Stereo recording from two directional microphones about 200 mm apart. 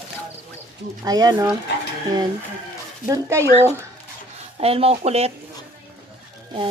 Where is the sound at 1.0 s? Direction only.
20° right (ahead or behind).